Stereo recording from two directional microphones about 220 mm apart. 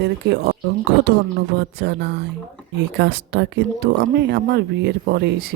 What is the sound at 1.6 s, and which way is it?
Speech, 50° right (ahead or behind).